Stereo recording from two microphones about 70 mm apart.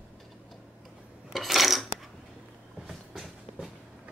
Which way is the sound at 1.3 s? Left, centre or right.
Centre.